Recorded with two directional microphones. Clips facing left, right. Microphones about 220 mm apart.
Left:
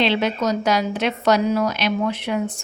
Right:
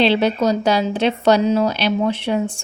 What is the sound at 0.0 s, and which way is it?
A woman's voice, 35° right (ahead or behind).